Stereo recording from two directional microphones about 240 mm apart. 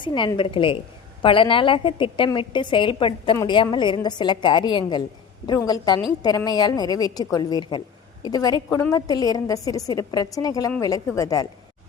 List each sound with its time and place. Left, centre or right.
0.0 s a woman's voice: centre